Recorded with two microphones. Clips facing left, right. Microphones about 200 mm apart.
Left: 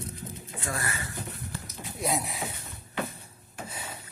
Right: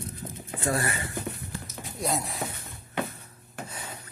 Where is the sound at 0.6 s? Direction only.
30° right (ahead or behind).